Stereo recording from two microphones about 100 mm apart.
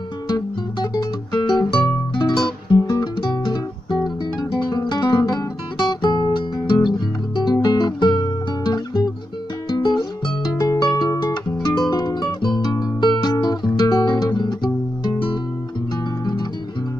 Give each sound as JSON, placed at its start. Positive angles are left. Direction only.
{"t": 0.3, "sound": "music", "side_deg": 45}